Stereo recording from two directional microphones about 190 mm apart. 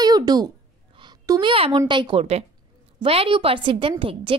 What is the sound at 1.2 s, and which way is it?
A woman's voice, 20° right (ahead or behind).